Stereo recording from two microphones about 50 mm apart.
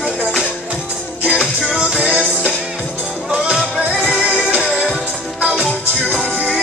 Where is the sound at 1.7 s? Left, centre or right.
Centre.